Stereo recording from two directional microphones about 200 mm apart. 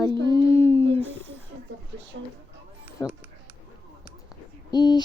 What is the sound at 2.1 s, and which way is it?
Speech, 60° right (ahead or behind).